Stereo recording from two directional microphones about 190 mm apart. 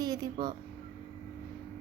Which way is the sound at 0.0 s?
20° right (ahead or behind).